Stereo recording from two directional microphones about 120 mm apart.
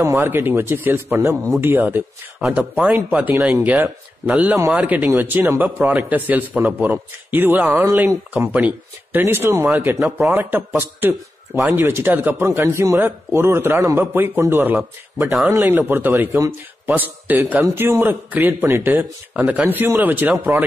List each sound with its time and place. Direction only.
0.0 s a man's voice: 20° right (ahead or behind)
10.0 s a man's voice: 5° right (ahead or behind)
10.3 s a man's voice: 15° right (ahead or behind)